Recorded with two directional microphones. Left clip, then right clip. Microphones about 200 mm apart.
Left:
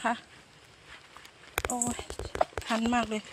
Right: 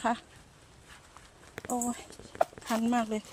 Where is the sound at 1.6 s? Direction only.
15° right (ahead or behind).